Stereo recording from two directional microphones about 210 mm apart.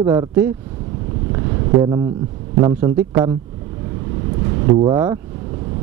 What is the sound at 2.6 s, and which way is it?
Speech, 20° right (ahead or behind).